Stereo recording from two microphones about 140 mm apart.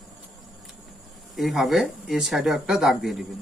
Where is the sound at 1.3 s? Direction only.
Centre (ahead or behind).